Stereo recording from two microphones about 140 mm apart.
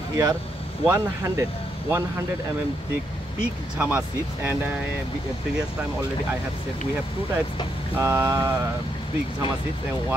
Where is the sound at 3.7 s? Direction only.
15° right (ahead or behind).